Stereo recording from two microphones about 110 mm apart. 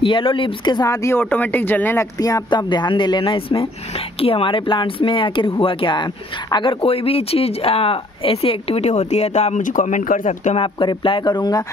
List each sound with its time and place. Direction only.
0.0 s speech: 50° left (ahead or behind)
0.8 s speech: 30° left (ahead or behind)
1.3 s speech: 15° left (ahead or behind)
2.1 s speech: 35° left (ahead or behind); by 9.9 s 90° left
10.6 s speech: 50° left (ahead or behind)